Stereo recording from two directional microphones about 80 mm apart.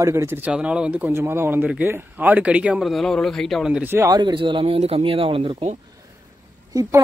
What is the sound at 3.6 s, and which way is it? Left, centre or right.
Speech, centre.